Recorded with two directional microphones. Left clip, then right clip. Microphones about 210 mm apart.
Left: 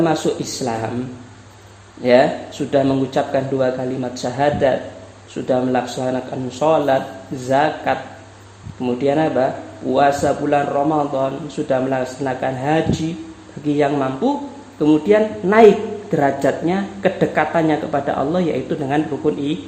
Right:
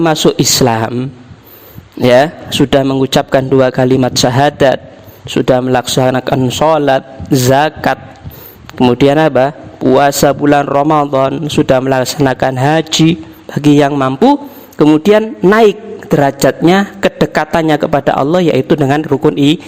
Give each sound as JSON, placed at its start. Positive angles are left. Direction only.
{"t": 0.2, "sound": "a man's voice", "side_deg": -50}
{"t": 2.0, "sound": "a man's voice", "side_deg": -55}